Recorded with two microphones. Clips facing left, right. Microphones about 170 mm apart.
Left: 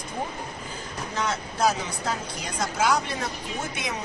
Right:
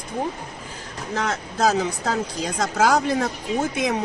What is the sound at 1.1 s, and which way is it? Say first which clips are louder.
A woman's voice: right 4 dB; 70° right (ahead or behind).